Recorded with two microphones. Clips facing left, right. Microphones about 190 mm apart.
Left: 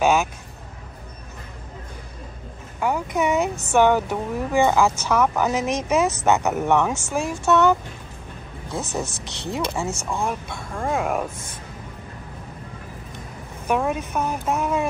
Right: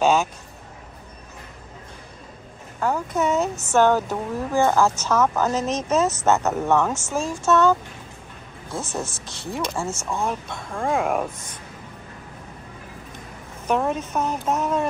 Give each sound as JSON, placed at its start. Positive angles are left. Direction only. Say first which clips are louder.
{"t": 0.0, "sound": "vehicle", "louder": "even", "side_deg": 10}
{"t": 2.8, "sound": "speech", "louder": "even", "side_deg": 15}
{"t": 9.0, "sound": "speech", "louder": "left 2 dB", "side_deg": 70}
{"t": 9.5, "sound": "speech", "louder": "left 1 dB", "side_deg": 20}
{"t": 10.2, "sound": "speech", "louder": "even", "side_deg": 5}
{"t": 13.7, "sound": "speech", "louder": "even", "side_deg": 10}